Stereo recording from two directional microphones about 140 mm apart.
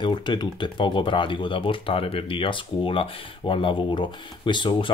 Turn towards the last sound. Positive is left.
turn(degrees=35)  # may be behind; listen again after turning